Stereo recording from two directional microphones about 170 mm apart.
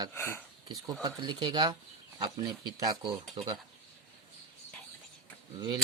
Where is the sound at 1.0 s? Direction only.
25° right (ahead or behind).